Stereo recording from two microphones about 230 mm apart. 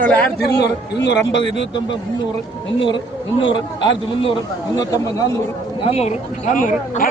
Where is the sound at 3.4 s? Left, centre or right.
Left.